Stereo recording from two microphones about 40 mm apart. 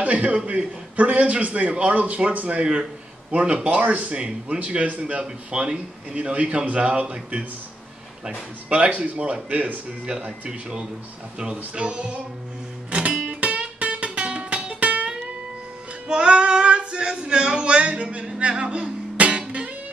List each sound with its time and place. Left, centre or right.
0.0 s a man's voice: right
0.9 s a man's voice: right
3.8 s a man's voice: right
8.3 s a man's voice: right
12.9 s music: right
16.1 s female singing: right
18.4 s music: right